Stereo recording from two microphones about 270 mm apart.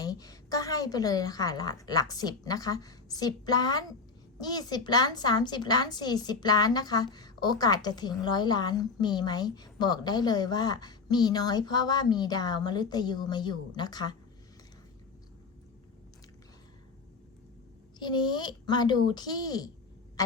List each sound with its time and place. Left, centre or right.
0.0 s a woman's voice: centre
18.0 s a woman's voice: centre
20.2 s a sound: centre